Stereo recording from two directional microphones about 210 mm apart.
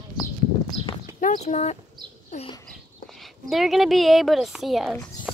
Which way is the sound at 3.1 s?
Centre (ahead or behind).